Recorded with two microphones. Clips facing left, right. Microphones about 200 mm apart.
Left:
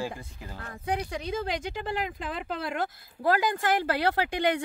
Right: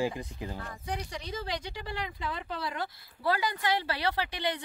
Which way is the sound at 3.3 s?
45° left (ahead or behind).